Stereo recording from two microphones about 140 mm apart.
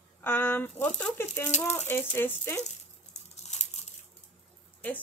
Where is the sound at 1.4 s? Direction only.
55° left (ahead or behind).